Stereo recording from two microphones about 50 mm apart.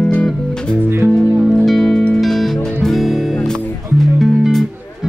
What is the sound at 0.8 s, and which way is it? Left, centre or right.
Music, right.